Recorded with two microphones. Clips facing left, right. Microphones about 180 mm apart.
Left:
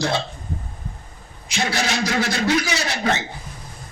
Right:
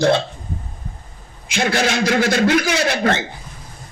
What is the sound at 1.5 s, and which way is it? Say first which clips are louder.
A man's voice: right 5 dB; 55° right (ahead or behind).